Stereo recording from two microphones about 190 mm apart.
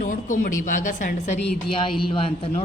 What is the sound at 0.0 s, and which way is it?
A woman's voice, 45° left (ahead or behind).